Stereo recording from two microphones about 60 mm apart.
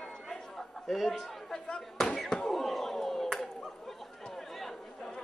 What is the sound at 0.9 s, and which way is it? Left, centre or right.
Speech, centre.